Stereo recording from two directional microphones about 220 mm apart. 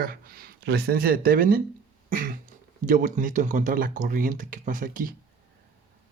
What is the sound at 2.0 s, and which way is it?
Cough, 40° right (ahead or behind).